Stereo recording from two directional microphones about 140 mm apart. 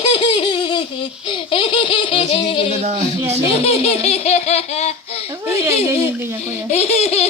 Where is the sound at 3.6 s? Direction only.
45° left (ahead or behind).